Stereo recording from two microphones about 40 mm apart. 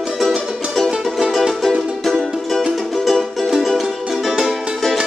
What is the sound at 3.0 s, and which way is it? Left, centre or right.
Music, centre.